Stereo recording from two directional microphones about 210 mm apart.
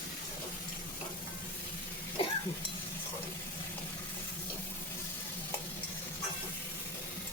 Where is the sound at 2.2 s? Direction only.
25° left (ahead or behind).